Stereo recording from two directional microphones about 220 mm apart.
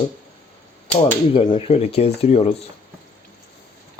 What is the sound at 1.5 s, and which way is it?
Rub, 30° left (ahead or behind).